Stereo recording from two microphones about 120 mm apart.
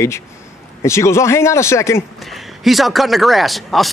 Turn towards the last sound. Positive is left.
turn(degrees=0)  # may be behind; listen again after turning